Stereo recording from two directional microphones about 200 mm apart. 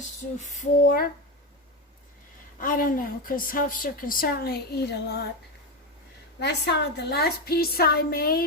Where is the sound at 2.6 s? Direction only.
45° left (ahead or behind).